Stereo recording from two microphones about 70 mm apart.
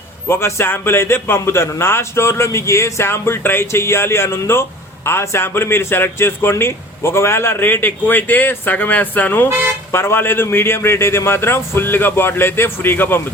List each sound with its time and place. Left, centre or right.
0.3 s a man's voice: left